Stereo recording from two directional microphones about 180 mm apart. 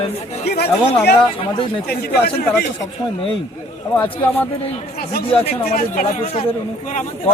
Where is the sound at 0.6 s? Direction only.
65° left (ahead or behind).